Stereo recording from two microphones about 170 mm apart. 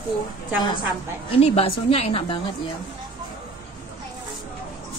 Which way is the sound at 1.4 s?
35° left (ahead or behind).